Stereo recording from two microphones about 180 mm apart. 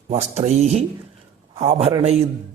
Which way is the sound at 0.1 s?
40° right (ahead or behind).